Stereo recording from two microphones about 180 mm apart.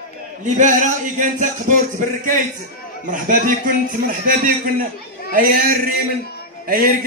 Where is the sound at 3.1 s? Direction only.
50° right (ahead or behind).